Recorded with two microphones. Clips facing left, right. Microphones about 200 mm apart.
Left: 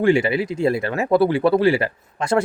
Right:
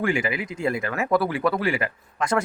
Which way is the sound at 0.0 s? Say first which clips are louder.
Left 8 dB; 30° left (ahead or behind).